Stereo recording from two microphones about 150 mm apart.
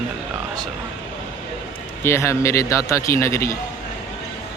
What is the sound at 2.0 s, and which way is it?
Speech, 20° left (ahead or behind).